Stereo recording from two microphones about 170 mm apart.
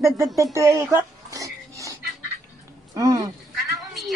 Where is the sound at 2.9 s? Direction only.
20° right (ahead or behind).